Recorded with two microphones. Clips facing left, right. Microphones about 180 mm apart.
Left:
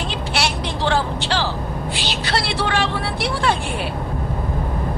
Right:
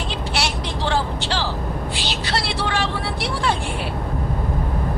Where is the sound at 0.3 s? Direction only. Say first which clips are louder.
Left 3 dB; 65° left (ahead or behind).